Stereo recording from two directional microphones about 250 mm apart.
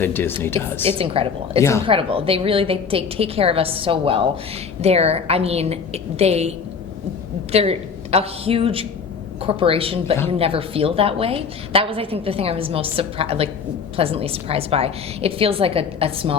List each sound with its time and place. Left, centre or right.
0.0 s speech: centre
0.9 s a woman's voice: right
7.5 s a woman's voice: right